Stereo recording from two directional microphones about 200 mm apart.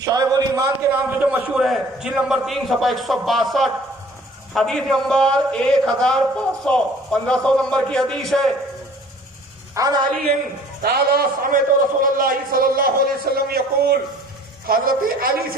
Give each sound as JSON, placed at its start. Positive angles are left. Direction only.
{"t": 0.0, "sound": "a man's voice", "side_deg": -20}
{"t": 9.7, "sound": "a sound", "side_deg": -20}
{"t": 10.8, "sound": "a man's voice", "side_deg": -50}